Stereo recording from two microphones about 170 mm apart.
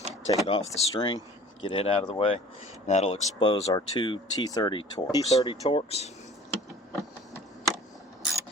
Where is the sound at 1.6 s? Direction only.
35° left (ahead or behind).